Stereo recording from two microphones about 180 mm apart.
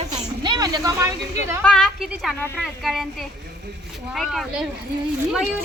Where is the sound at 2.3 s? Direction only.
10° left (ahead or behind).